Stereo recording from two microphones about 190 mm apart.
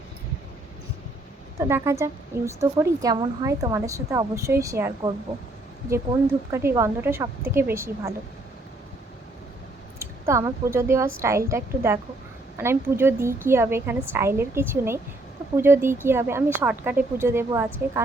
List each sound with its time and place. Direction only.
1.5 s speech: 15° right (ahead or behind)
6.5 s speech: 15° right (ahead or behind)
10.0 s speech: 15° right (ahead or behind)